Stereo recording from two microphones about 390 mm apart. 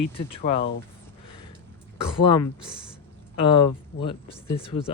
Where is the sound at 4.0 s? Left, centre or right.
Centre.